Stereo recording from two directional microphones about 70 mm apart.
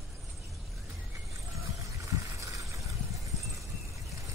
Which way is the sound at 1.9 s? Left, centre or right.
Right.